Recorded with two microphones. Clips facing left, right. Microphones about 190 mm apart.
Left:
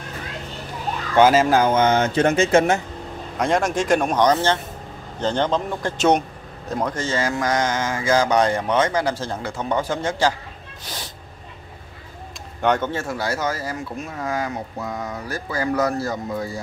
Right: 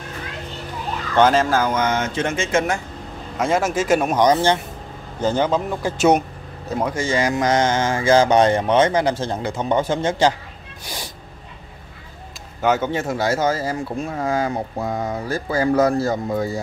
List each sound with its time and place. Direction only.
1.1 s speech: 10° left (ahead or behind)
1.6 s speech: 25° left (ahead or behind)
3.3 s speech: centre (ahead or behind); by 10.3 s 20° right (ahead or behind)
12.6 s speech: 5° right (ahead or behind)
12.9 s speech: 20° right (ahead or behind)